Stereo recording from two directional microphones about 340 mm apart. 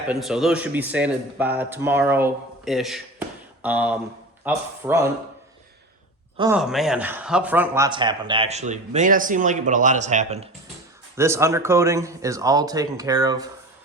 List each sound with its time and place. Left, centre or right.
0.1 s a man's voice: centre
6.3 s speech: centre
6.6 s speech: centre
11.2 s speech: centre